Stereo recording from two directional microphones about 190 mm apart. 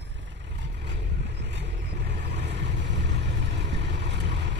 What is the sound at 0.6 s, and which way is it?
Vehicle, 65° right (ahead or behind).